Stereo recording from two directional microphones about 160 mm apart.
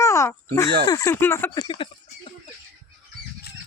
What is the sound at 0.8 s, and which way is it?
Speech, 20° left (ahead or behind).